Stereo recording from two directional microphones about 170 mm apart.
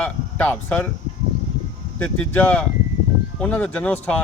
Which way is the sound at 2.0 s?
10° left (ahead or behind).